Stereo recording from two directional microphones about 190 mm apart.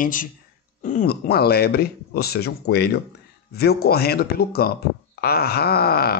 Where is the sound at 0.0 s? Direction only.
45° left (ahead or behind).